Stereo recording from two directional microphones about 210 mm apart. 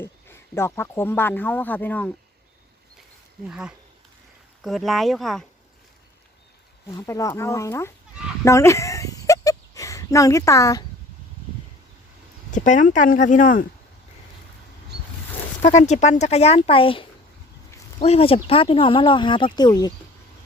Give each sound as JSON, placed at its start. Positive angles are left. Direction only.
{"t": 0.0, "sound": "speech", "side_deg": 10}
{"t": 3.5, "sound": "speech", "side_deg": -5}
{"t": 6.9, "sound": "speech", "side_deg": 15}
{"t": 8.4, "sound": "a sound", "side_deg": 15}
{"t": 12.5, "sound": "speech", "side_deg": 35}
{"t": 15.6, "sound": "speech", "side_deg": 35}